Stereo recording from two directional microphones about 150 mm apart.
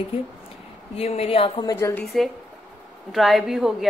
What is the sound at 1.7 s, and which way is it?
Speech, 20° left (ahead or behind).